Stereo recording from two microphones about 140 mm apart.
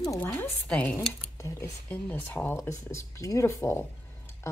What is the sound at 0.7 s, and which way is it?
Speech, 10° left (ahead or behind).